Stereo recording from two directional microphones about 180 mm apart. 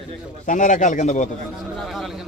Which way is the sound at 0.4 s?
45° left (ahead or behind).